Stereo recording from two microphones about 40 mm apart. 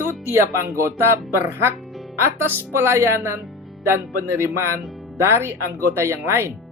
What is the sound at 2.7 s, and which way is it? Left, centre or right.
Speech, right.